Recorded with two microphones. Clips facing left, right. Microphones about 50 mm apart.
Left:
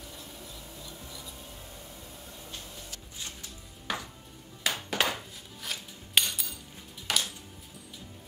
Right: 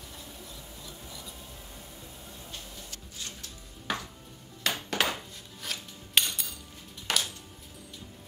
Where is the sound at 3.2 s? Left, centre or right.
Centre.